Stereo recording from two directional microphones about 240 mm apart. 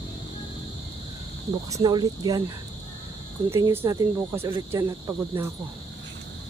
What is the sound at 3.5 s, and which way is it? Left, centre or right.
Cricket, centre.